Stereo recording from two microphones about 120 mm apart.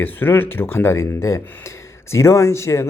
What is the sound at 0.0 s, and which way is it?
Speech, 15° left (ahead or behind).